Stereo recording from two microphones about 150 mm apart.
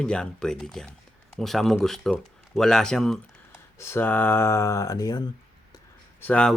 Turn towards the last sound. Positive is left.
turn(degrees=5)  # may be behind; listen again after turning